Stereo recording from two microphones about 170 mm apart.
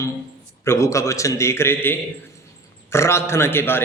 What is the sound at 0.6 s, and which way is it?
A man's voice, 15° left (ahead or behind).